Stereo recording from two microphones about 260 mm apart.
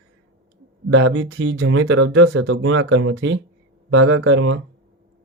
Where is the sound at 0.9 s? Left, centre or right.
Right.